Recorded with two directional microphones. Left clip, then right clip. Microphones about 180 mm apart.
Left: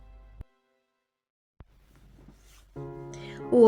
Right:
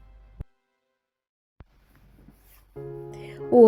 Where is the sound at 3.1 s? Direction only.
20° right (ahead or behind).